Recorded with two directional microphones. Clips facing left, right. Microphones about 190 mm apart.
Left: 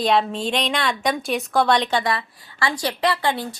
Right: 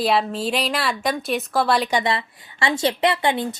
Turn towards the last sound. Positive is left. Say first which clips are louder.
# right 2 dB
turn(degrees=-20)  # may be behind; listen again after turning